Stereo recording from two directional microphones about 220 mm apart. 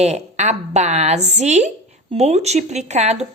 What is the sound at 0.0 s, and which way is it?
Speech, 30° right (ahead or behind).